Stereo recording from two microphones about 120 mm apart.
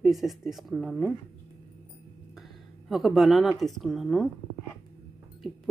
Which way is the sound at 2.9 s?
Centre (ahead or behind).